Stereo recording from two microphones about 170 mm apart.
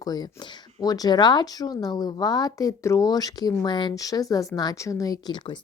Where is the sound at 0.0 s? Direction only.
25° left (ahead or behind).